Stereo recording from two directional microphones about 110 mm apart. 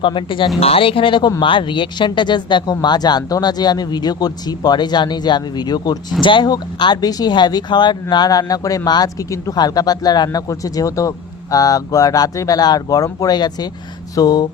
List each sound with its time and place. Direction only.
0.0 s speech: 50° left (ahead or behind)